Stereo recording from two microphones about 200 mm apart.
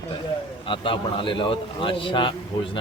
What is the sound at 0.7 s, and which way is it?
A man's voice, 25° left (ahead or behind).